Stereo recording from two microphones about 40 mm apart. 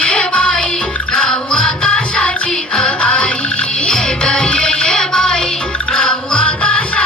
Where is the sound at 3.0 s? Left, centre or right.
Left.